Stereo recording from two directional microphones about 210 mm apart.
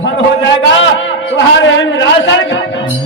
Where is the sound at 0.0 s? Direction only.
60° left (ahead or behind).